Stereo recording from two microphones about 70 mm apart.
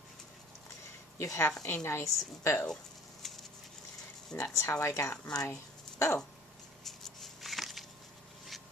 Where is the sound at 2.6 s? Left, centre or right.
Centre.